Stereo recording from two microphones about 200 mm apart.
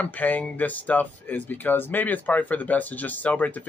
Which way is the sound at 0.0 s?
10° left (ahead or behind).